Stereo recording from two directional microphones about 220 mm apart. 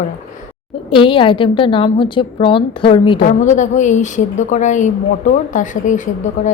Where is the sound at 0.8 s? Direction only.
25° left (ahead or behind).